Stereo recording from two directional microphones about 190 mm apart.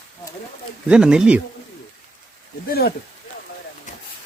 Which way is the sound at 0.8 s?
5° right (ahead or behind).